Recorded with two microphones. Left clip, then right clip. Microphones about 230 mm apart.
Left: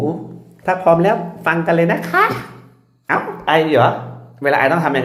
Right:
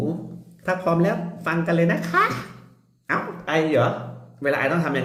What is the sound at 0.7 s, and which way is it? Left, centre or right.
A child's voice, centre.